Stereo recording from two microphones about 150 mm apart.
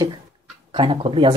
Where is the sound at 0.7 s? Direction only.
35° right (ahead or behind).